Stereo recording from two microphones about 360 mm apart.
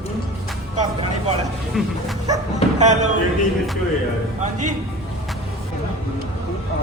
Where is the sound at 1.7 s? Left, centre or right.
Centre.